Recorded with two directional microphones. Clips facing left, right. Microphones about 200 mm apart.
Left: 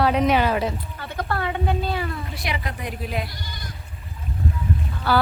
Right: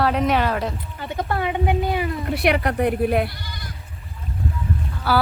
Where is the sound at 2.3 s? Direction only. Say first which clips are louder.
Right 10 dB; 65° right (ahead or behind).